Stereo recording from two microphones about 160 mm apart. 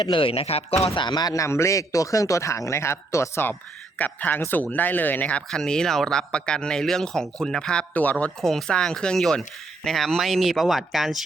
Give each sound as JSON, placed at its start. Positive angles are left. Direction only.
{"t": 0.0, "sound": "a man's voice", "side_deg": 35}